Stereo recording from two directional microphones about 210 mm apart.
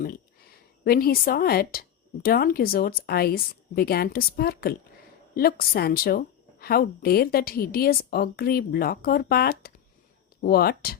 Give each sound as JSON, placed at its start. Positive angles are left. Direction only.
{"t": 0.9, "sound": "a woman's voice", "side_deg": 45}